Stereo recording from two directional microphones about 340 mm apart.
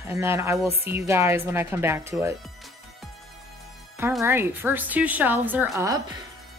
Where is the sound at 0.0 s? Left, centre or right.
Centre.